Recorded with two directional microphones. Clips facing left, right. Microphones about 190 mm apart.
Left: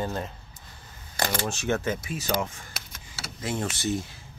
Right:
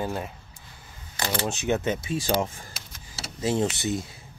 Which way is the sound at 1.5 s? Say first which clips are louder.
Right 2 dB; 15° right (ahead or behind).